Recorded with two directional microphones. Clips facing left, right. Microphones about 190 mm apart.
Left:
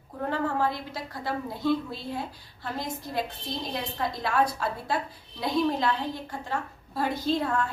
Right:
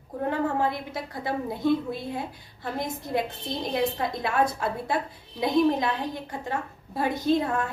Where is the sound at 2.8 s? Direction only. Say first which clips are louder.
Right 4 dB; 20° right (ahead or behind).